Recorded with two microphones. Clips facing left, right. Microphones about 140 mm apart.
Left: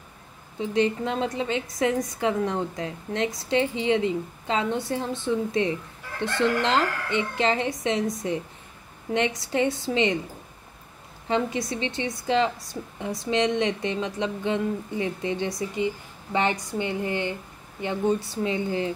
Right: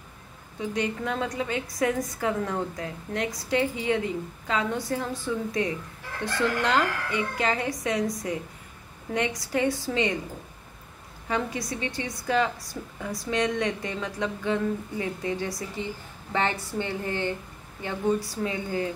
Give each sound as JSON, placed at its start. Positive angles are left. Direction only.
{"t": 0.6, "sound": "a woman's voice", "side_deg": 25}
{"t": 11.2, "sound": "a woman's voice", "side_deg": 25}